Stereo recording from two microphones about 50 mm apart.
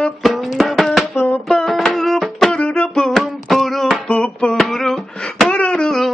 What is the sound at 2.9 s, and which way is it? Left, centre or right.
Music, centre.